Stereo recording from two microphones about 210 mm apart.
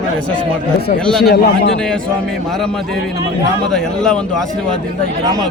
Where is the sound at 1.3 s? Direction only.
50° left (ahead or behind).